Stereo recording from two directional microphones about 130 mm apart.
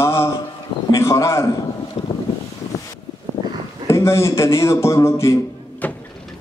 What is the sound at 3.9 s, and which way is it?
A man's voice, 20° left (ahead or behind).